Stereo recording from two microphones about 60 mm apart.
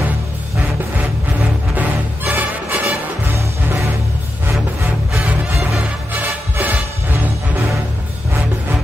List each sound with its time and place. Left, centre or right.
1.8 s music: right
6.1 s music: right